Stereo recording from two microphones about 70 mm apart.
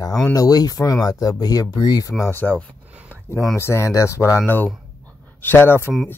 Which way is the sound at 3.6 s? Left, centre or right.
Left.